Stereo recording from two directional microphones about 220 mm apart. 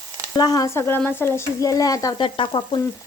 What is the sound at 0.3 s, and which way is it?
Speech, 15° left (ahead or behind).